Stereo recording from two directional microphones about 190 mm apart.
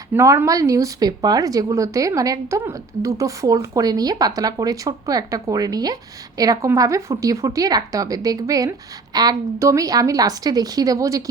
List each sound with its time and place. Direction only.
0.1 s a woman's voice: 15° right (ahead or behind)